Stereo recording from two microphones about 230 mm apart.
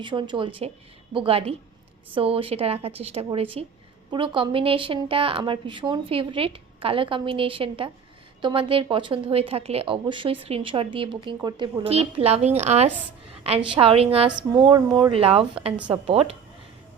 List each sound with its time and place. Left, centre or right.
0.0 s a woman's voice: right